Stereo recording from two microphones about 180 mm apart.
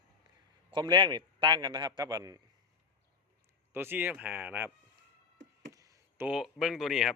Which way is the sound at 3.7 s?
10° right (ahead or behind).